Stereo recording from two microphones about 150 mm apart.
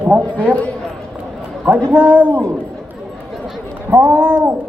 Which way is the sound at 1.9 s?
10° right (ahead or behind).